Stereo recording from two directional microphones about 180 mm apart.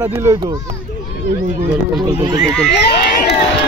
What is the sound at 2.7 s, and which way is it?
Speech, 70° left (ahead or behind).